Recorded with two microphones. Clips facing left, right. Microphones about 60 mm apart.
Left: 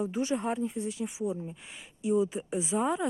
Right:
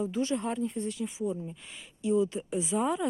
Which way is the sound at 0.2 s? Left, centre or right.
Centre.